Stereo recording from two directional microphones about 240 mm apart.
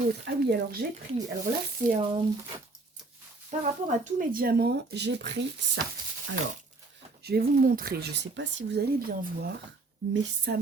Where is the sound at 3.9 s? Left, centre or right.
Right.